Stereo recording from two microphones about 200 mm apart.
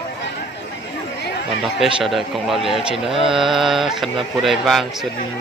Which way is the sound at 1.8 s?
Centre (ahead or behind).